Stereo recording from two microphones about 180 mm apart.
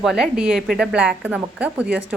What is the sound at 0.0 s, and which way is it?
A woman's voice, 5° right (ahead or behind).